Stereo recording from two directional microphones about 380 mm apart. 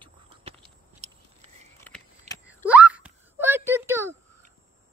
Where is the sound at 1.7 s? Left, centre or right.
Centre.